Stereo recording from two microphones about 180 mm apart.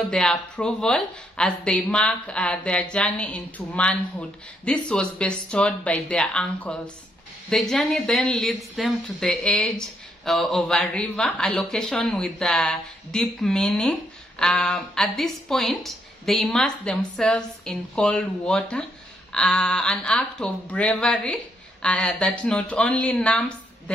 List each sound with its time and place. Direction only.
0.1 s speech: 5° left (ahead or behind)